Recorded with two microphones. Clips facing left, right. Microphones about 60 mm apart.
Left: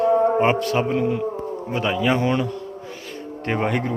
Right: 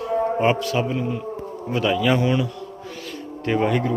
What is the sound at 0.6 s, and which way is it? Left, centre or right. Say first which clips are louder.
Speech: left 3 dB; left.